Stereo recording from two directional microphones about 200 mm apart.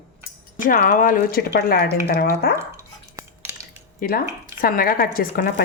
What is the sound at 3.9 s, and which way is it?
Speech, 45° left (ahead or behind).